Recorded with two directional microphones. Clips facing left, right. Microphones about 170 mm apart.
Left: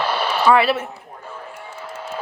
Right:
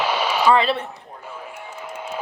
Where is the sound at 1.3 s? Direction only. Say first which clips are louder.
Even; 10° right (ahead or behind).